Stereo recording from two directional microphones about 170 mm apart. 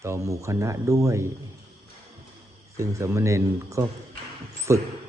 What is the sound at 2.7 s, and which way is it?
Speech, 15° right (ahead or behind).